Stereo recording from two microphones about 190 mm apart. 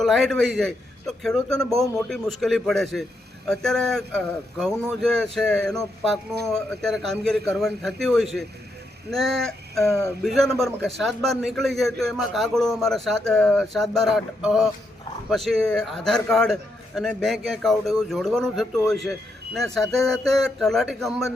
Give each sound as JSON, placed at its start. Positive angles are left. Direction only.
{"t": 0.0, "sound": "a man's voice", "side_deg": 0}
{"t": 9.0, "sound": "a sound", "side_deg": 0}
{"t": 9.8, "sound": "speech", "side_deg": 15}
{"t": 10.2, "sound": "a man's voice", "side_deg": 0}